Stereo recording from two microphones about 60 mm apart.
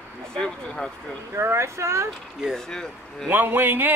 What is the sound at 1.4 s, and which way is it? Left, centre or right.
Speech, right.